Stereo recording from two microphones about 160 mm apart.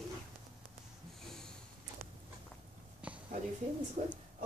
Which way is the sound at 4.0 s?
50° right (ahead or behind).